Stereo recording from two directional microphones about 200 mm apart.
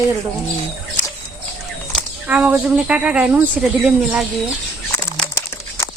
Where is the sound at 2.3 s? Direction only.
5° right (ahead or behind).